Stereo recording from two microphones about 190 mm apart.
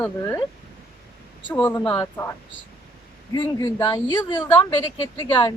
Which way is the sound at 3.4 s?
20° left (ahead or behind).